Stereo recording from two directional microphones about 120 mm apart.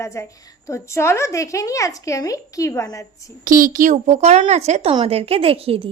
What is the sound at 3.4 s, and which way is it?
Speech, 90° right.